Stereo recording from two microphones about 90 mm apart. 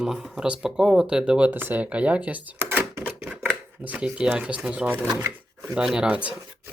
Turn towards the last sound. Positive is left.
turn(degrees=-15)  # may be behind; listen again after turning